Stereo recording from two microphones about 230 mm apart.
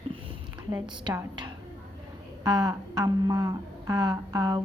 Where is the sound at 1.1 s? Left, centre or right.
Centre.